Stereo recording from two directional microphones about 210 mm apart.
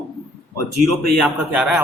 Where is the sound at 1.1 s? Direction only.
5° right (ahead or behind).